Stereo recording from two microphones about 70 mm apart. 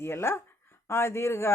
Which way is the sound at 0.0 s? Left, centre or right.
Left.